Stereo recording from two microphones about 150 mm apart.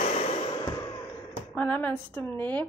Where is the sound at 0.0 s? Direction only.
45° left (ahead or behind).